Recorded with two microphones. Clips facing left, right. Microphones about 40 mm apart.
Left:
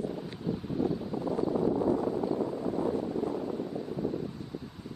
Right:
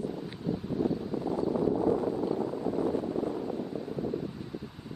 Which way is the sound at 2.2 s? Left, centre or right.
Centre.